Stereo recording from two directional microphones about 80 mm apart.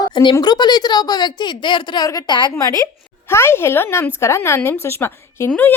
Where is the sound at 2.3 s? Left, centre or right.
Left.